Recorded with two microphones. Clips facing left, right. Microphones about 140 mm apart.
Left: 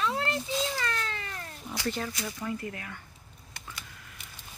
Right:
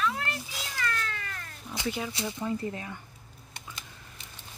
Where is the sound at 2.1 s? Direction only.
25° right (ahead or behind).